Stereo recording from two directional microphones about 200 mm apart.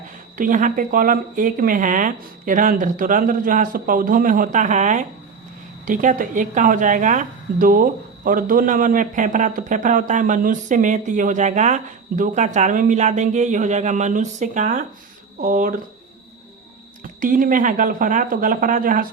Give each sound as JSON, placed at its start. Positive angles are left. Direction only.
{"t": 0.3, "sound": "a woman's voice", "side_deg": -40}
{"t": 17.0, "sound": "speech", "side_deg": -40}